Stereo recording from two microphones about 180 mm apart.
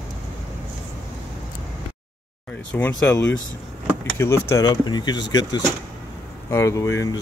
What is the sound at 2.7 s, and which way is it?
Speech, 10° left (ahead or behind).